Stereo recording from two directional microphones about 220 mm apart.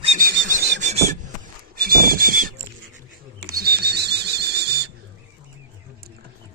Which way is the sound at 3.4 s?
45° right (ahead or behind).